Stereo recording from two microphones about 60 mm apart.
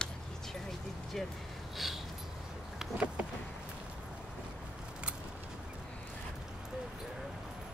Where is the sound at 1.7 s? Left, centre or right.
Centre.